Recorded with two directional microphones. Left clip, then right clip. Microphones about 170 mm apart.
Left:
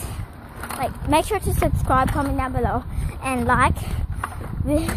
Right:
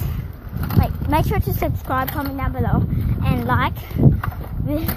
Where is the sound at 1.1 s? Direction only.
5° left (ahead or behind).